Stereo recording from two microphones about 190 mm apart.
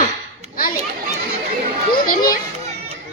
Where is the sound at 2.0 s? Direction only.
50° left (ahead or behind).